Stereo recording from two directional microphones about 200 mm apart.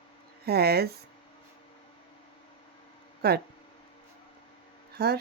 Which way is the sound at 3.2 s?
50° right (ahead or behind).